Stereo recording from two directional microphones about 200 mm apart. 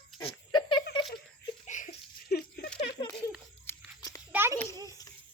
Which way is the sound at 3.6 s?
10° left (ahead or behind).